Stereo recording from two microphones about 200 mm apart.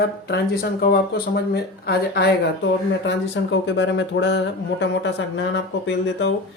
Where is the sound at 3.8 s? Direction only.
65° left (ahead or behind).